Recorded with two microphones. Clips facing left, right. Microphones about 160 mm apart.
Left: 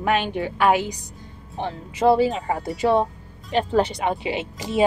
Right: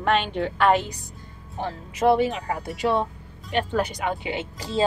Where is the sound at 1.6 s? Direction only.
30° left (ahead or behind).